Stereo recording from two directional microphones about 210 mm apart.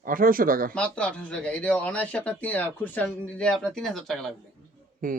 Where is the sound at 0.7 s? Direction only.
5° left (ahead or behind).